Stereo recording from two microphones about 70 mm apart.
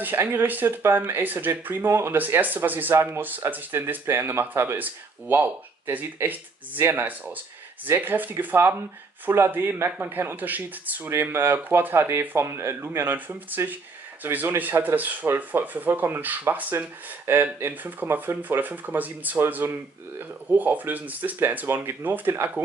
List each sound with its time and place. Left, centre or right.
0.0 s speech: right
2.1 s speech: right
14.2 s speech: right